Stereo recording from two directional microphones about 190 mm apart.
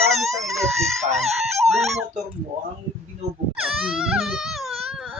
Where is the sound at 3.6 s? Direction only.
5° right (ahead or behind).